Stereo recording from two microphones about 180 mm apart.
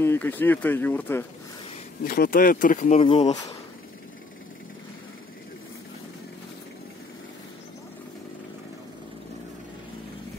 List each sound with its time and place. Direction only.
0.0 s speech: 10° left (ahead or behind)
2.0 s speech: 55° left (ahead or behind); by 3.3 s 35° left (ahead or behind)